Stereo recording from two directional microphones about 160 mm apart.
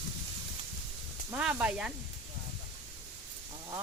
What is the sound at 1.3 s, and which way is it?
Speech, 10° right (ahead or behind).